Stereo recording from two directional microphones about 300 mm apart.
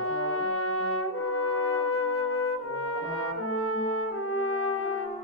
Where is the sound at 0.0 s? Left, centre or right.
Left.